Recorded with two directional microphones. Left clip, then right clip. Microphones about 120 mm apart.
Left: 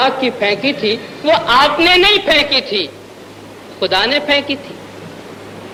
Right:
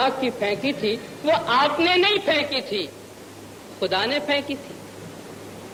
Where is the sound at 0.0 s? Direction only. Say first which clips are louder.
Left 8 dB; 25° left (ahead or behind).